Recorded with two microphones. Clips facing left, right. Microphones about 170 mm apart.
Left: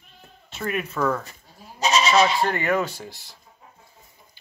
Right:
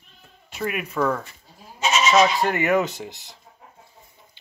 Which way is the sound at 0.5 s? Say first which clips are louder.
Even; 10° right (ahead or behind).